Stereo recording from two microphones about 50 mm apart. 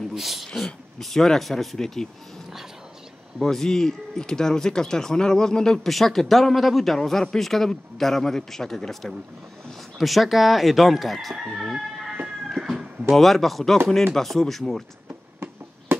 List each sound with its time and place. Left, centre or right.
0.1 s speech: centre
3.3 s speech: centre
9.9 s chicken: centre
11.7 s a sound: centre
13.1 s chicken: centre
14.1 s speech: centre
15.0 s a sound: right